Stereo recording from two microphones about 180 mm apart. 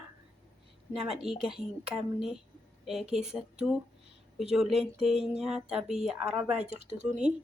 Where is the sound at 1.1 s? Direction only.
5° right (ahead or behind).